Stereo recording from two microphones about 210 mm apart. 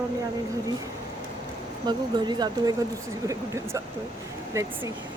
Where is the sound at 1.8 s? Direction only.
20° right (ahead or behind).